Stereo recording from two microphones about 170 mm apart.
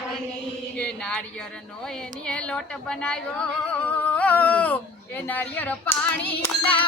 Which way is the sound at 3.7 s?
10° left (ahead or behind).